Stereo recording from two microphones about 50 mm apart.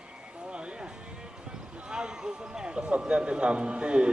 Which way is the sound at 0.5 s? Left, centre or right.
Centre.